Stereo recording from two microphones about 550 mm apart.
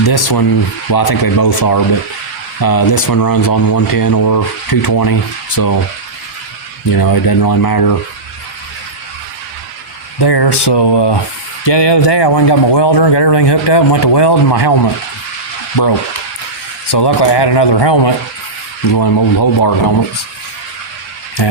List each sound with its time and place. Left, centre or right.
0.0 s speech: left
6.9 s speech: left
10.2 s speech: left
16.9 s speech: left